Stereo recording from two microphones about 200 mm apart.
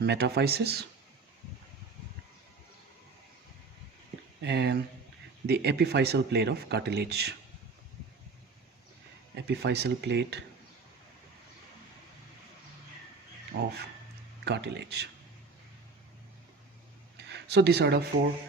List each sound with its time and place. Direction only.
0.0 s speech: 55° right (ahead or behind)
4.4 s speech: 55° right (ahead or behind)
9.3 s speech: 55° right (ahead or behind)
13.5 s speech: 50° right (ahead or behind)
17.2 s speech: 55° right (ahead or behind)